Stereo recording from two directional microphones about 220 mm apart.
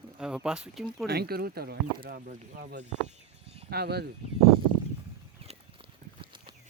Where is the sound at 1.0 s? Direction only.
45° right (ahead or behind).